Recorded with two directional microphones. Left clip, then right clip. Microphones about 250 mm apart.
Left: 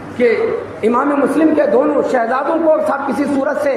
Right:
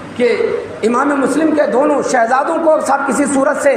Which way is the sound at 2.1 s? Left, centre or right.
Right.